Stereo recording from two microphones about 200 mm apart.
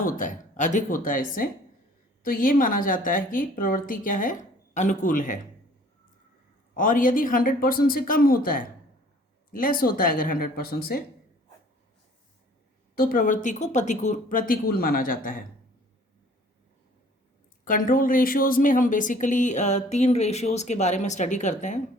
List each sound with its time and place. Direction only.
0.0 s speech: 40° left (ahead or behind)
6.7 s speech: 40° left (ahead or behind)
13.0 s speech: 45° left (ahead or behind)
17.7 s speech: 45° left (ahead or behind)